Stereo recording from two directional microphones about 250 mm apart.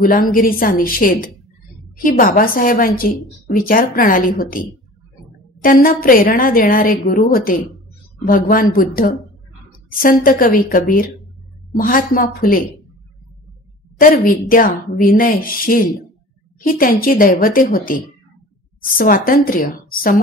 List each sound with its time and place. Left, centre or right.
0.0 s a woman's voice: left
5.6 s a woman's voice: left
13.9 s a woman's voice: left